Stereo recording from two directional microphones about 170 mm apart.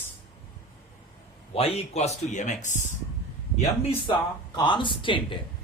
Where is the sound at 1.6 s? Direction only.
35° left (ahead or behind).